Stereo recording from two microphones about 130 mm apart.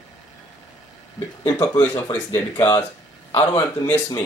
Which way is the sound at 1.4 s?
30° left (ahead or behind).